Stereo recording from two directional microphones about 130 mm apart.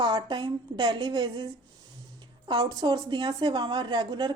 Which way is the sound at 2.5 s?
35° right (ahead or behind).